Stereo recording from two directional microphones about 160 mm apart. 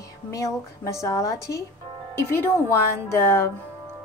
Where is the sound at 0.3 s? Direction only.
20° left (ahead or behind).